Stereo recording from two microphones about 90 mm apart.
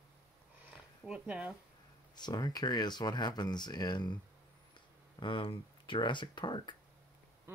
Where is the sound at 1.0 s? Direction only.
15° right (ahead or behind).